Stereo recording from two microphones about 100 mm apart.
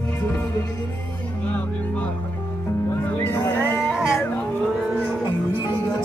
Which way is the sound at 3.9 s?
5° right (ahead or behind).